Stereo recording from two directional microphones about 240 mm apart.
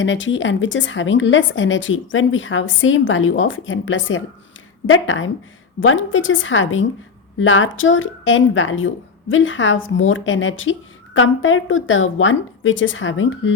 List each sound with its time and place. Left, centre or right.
0.0 s speech: left